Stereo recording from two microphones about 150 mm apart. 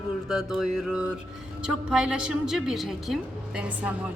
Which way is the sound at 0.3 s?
5° right (ahead or behind).